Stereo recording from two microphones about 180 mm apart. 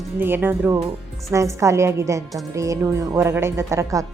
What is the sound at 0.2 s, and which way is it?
Speech, 10° right (ahead or behind).